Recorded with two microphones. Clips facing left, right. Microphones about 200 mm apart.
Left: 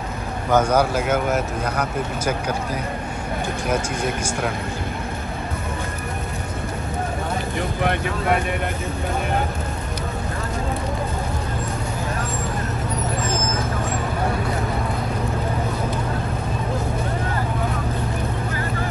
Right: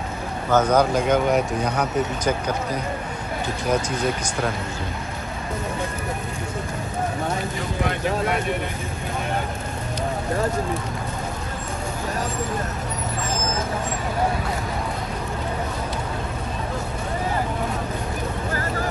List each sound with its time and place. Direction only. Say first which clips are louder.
0.5 s speech: even; 10° left (ahead or behind)
7.8 s speech: right 1 dB; 55° left (ahead or behind)